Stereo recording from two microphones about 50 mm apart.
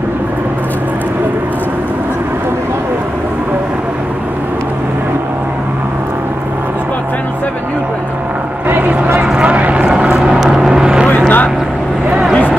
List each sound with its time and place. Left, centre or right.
8.6 s a sound: right
9.2 s vehicle: right
9.9 s vehicle: centre
11.1 s vehicle: left